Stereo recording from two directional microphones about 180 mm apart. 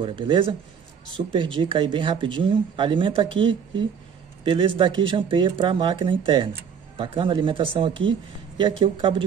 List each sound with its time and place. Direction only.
0.0 s speech: 25° right (ahead or behind)